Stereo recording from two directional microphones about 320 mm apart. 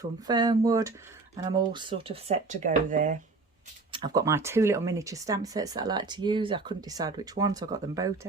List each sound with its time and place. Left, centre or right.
0.3 s speech: centre
3.9 s speech: centre